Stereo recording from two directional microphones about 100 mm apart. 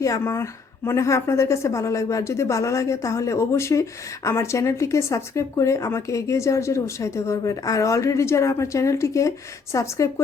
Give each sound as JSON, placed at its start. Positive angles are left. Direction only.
{"t": 0.0, "sound": "a woman's voice", "side_deg": 30}